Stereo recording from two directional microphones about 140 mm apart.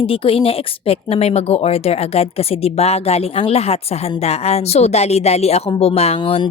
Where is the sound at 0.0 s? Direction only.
40° left (ahead or behind).